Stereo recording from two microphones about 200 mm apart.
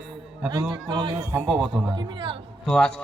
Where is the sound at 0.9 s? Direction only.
25° right (ahead or behind).